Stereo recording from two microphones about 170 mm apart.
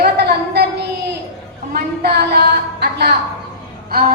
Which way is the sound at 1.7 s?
65° right (ahead or behind).